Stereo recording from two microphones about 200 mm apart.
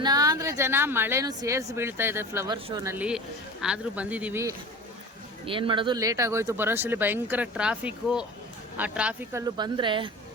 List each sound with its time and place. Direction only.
0.0 s speech: 20° right (ahead or behind)
5.5 s speech: 25° right (ahead or behind); by 9.4 s 5° right (ahead or behind)
9.6 s a woman's voice: 25° right (ahead or behind)